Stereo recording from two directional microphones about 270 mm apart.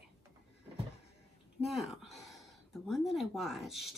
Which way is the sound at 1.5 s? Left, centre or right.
Centre.